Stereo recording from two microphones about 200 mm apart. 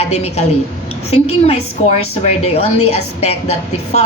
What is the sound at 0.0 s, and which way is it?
Speech, 30° left (ahead or behind).